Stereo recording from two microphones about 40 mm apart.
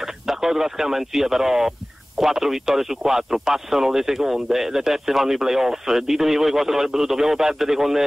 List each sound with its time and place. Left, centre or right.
0.0 s speech: centre